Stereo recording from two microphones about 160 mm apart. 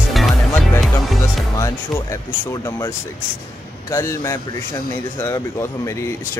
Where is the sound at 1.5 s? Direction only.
20° left (ahead or behind).